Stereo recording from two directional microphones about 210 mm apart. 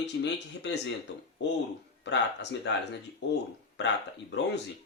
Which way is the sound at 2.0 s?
55° left (ahead or behind).